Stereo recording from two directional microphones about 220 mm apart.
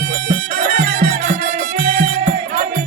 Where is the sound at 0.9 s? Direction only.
40° right (ahead or behind).